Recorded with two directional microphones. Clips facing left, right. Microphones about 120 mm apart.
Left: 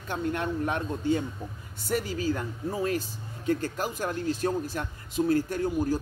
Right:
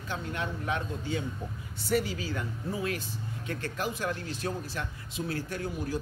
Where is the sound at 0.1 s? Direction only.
50° left (ahead or behind).